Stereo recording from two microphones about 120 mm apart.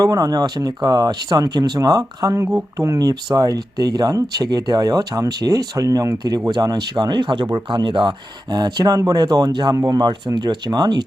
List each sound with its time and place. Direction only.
0.0 s speech: 30° right (ahead or behind)